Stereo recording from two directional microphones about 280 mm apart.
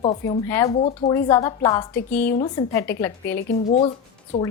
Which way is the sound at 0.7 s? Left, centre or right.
Left.